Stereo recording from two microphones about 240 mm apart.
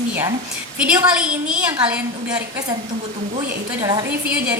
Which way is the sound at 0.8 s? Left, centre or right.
Centre.